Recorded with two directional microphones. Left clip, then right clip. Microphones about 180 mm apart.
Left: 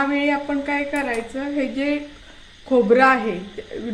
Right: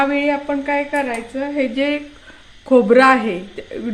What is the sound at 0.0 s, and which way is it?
A woman's voice, 20° right (ahead or behind).